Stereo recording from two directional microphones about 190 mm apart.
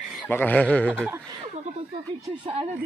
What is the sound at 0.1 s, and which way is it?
Speech, 10° left (ahead or behind).